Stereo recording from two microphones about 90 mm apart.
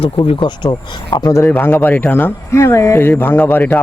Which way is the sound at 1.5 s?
20° left (ahead or behind).